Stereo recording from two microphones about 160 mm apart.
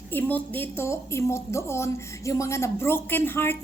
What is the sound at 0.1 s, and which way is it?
A woman's voice, 10° left (ahead or behind).